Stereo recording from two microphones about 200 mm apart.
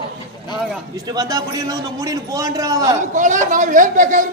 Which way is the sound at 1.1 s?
20° right (ahead or behind).